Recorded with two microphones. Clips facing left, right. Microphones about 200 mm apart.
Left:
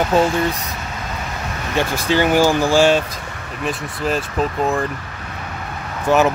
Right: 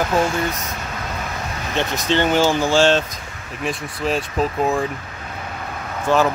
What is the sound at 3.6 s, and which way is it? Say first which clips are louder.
Speech: left 1 dB; centre (ahead or behind).